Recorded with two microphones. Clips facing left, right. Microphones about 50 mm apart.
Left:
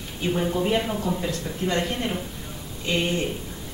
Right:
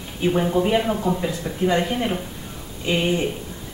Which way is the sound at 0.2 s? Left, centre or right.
Centre.